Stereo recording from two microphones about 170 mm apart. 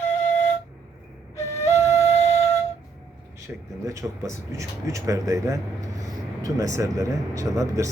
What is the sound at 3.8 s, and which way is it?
Speech, 20° right (ahead or behind).